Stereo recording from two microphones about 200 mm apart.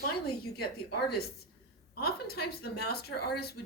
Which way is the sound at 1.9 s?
50° left (ahead or behind).